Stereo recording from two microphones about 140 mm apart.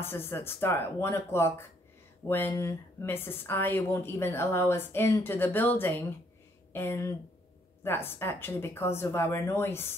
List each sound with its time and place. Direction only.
0.0 s speech: 15° left (ahead or behind)